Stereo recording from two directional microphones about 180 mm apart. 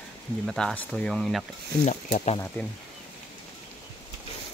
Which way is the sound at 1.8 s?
40° left (ahead or behind).